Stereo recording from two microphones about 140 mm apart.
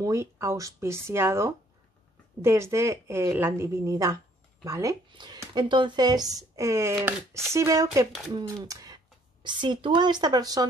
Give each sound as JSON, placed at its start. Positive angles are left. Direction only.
{"t": 0.0, "sound": "speech", "side_deg": -20}